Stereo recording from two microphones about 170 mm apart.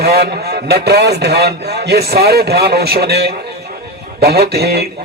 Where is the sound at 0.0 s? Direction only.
70° right (ahead or behind).